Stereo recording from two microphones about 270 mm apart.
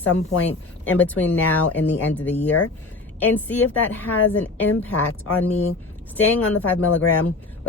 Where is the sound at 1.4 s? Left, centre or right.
Left.